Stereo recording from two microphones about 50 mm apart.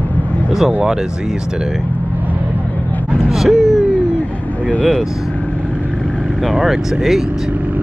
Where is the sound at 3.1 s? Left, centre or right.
Centre.